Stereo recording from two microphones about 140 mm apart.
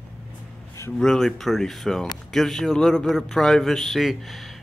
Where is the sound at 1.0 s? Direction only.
5° left (ahead or behind).